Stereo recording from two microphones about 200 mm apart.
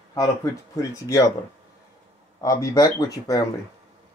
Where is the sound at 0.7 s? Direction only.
15° left (ahead or behind).